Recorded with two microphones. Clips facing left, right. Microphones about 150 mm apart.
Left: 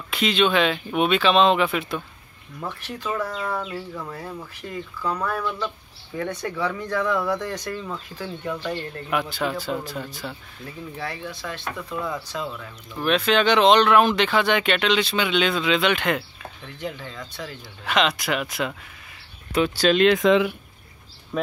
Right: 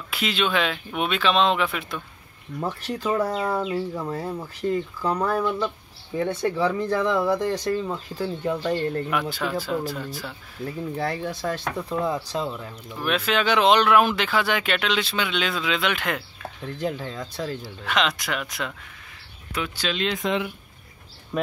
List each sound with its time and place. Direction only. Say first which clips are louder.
0.1 s speech: left 4 dB; 5° right (ahead or behind)
2.9 s speech: right 4 dB; 35° right (ahead or behind)
9.1 s speech: left 1 dB; centre (ahead or behind)
11.0 s speech: right 4 dB; 40° right (ahead or behind)
13.0 s speech: left 4 dB; 5° right (ahead or behind)
16.7 s speech: right 4 dB; 35° right (ahead or behind)
17.8 s speech: left 3 dB; centre (ahead or behind)
19.5 s speech: left 9 dB; 35° left (ahead or behind)
19.9 s speech: left 9 dB; 60° left (ahead or behind); by 20.5 s 90° left